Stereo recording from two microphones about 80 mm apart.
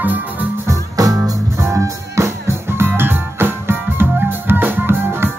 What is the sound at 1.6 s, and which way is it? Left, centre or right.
Music, right.